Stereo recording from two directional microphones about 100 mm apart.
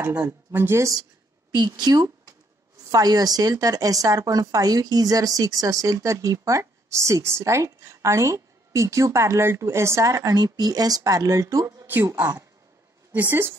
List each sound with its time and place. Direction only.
0.5 s speech: 25° right (ahead or behind)
1.8 s a woman's voice: 45° right (ahead or behind); by 13.6 s 20° right (ahead or behind)